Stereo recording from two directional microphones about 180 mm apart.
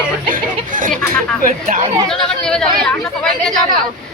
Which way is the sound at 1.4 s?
50° right (ahead or behind).